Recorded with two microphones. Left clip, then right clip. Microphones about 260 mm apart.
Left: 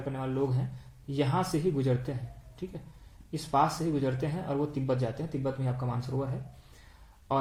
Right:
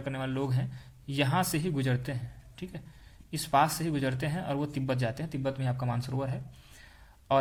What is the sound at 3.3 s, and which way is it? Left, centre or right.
Speech, right.